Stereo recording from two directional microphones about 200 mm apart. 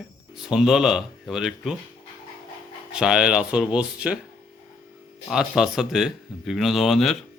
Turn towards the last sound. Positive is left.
turn(degrees=0)  # may be behind; listen again after turning